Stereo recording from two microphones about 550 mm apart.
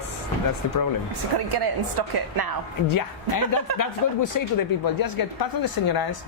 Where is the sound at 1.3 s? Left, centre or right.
Right.